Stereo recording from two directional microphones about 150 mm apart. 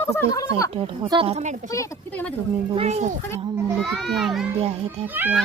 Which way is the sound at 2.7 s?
45° right (ahead or behind).